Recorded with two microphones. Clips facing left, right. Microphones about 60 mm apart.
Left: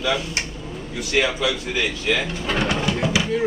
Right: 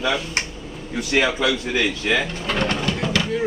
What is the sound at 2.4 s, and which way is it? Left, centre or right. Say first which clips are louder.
Pigeon: left 4 dB; centre.